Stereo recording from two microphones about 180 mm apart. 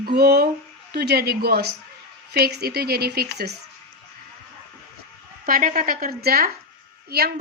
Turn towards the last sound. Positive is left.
turn(degrees=-60)  # may be behind; listen again after turning